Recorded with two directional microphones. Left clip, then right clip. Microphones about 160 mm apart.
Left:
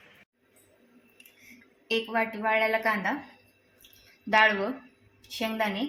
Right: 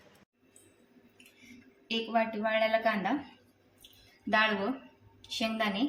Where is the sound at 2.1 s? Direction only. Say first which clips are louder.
Left 1 dB; 20° left (ahead or behind).